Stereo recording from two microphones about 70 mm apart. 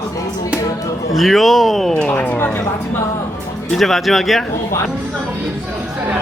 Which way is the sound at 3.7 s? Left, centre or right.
Centre.